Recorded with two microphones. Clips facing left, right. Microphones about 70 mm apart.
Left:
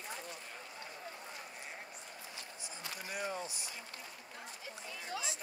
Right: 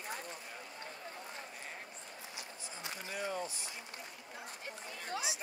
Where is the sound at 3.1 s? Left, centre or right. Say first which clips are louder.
Right 1 dB; centre.